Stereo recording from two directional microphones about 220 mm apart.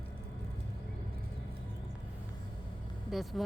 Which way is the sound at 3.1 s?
Centre (ahead or behind).